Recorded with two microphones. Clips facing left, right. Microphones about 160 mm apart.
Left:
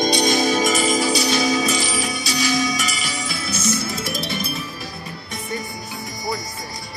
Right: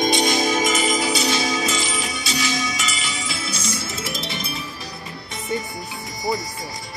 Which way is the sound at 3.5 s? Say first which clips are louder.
Left 5 dB; 10° right (ahead or behind).